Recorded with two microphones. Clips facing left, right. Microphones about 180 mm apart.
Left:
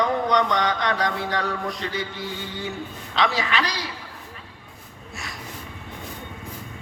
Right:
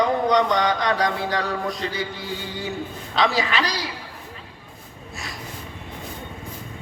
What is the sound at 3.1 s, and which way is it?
Speech, 35° right (ahead or behind).